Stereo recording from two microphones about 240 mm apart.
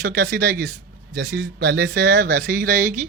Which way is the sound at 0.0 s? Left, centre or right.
Right.